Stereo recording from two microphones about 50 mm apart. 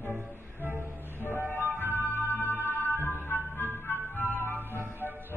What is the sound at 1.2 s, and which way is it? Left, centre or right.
Music, left.